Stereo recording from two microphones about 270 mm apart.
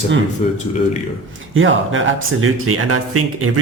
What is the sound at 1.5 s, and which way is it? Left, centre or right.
Speech, right.